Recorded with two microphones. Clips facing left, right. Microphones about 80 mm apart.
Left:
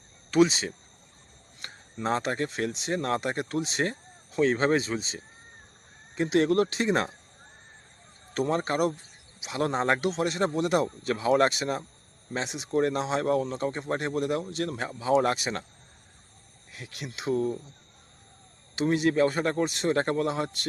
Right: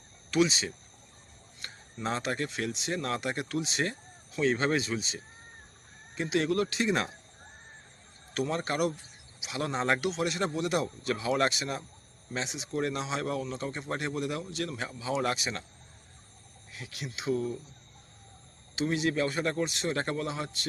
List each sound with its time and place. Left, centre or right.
0.3 s speech: left
6.1 s speech: left
8.3 s speech: left
16.7 s speech: left
18.8 s speech: left